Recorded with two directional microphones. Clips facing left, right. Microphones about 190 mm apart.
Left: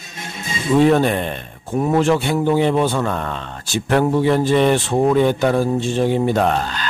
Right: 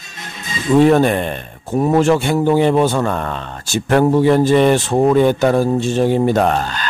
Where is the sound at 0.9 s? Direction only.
50° right (ahead or behind).